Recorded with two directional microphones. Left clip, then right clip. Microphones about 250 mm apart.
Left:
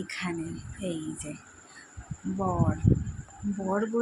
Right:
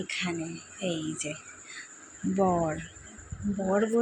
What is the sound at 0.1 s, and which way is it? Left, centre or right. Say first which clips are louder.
Speech: right 2 dB; centre.